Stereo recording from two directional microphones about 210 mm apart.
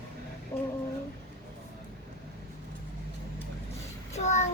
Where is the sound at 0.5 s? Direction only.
15° left (ahead or behind).